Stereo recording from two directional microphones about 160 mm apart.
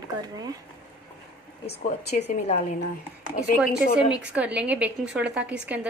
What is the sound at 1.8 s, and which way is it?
Speech, 45° left (ahead or behind).